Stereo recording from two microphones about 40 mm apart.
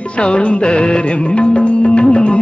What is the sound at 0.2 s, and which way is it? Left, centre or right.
Music, left.